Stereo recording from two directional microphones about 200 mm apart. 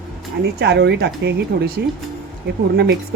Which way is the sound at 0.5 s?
55° right (ahead or behind).